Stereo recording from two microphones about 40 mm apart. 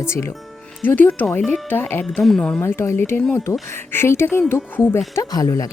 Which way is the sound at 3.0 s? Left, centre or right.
Left.